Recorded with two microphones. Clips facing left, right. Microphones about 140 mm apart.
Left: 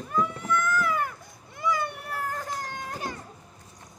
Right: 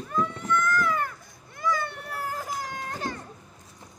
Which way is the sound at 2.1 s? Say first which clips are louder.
Right 2 dB; 5° right (ahead or behind).